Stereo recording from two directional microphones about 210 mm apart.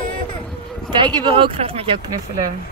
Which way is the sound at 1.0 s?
20° right (ahead or behind).